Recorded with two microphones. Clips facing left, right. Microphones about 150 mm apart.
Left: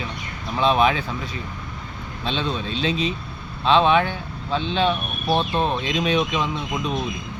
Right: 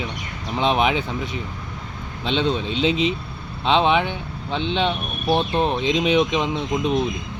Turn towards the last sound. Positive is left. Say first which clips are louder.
# right 4 dB
turn(degrees=-20)  # may be behind; listen again after turning